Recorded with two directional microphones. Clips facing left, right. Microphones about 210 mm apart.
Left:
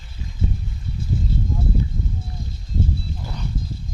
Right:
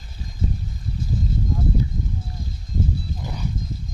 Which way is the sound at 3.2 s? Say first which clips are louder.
Right 4 dB; 10° right (ahead or behind).